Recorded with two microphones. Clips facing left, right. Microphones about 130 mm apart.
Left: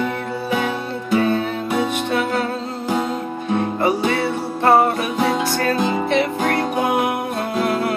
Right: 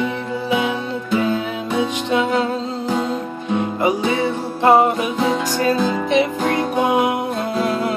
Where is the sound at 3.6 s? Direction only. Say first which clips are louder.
Even; 15° right (ahead or behind).